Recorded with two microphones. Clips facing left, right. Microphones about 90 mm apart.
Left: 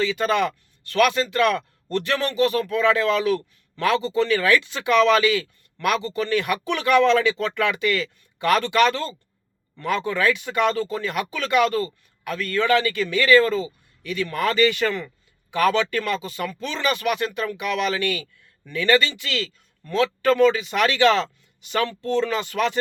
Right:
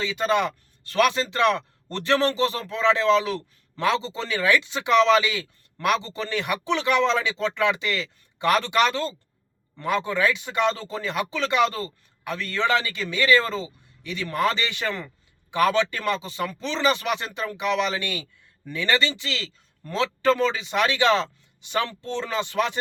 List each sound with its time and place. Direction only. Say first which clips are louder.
0.0 s speech: left 2 dB; 20° right (ahead or behind)